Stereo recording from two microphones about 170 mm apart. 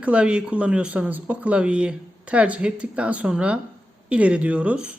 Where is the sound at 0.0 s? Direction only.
5° right (ahead or behind).